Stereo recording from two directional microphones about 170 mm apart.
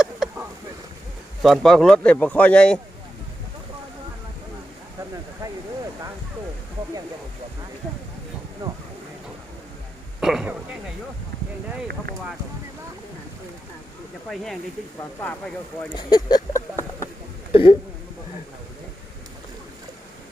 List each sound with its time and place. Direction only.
0.0 s a sound: 5° right (ahead or behind)
1.4 s speech: centre (ahead or behind)
8.6 s speech: 20° right (ahead or behind)
10.2 s speech: 5° right (ahead or behind)
14.3 s speech: centre (ahead or behind)
15.9 s a sound: 25° left (ahead or behind)
17.5 s speech: 30° left (ahead or behind)